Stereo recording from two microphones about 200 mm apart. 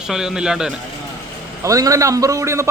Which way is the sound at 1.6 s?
15° right (ahead or behind).